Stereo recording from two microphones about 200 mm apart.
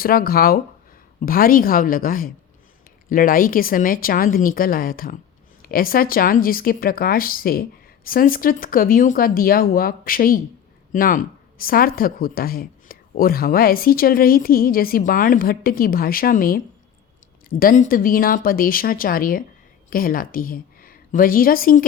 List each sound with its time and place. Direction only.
0.0 s a woman's voice: 45° left (ahead or behind)